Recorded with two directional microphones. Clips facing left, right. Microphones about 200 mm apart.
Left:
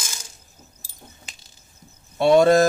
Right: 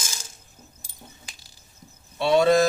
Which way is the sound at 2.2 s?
50° left (ahead or behind).